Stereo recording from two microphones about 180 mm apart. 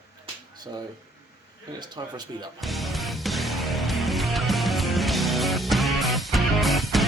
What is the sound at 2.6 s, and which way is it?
Music, centre (ahead or behind).